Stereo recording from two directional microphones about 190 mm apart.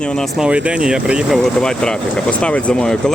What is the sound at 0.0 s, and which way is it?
Speech, 5° left (ahead or behind).